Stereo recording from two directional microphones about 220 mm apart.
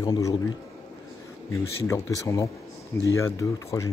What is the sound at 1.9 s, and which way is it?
Speech, 15° left (ahead or behind).